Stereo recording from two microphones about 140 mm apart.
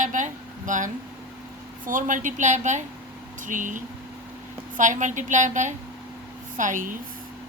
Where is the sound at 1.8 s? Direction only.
70° right (ahead or behind).